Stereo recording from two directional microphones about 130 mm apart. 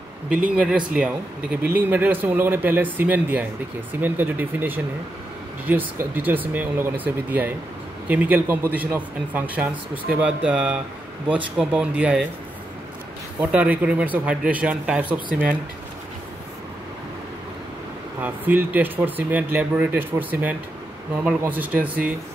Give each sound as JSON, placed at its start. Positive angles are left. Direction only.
{"t": 0.5, "sound": "speech", "side_deg": -10}
{"t": 13.4, "sound": "speech", "side_deg": -10}
{"t": 15.1, "sound": "speech", "side_deg": -90}
{"t": 18.2, "sound": "speech", "side_deg": -15}